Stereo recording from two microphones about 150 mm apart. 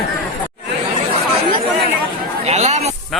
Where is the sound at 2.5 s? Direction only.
45° right (ahead or behind).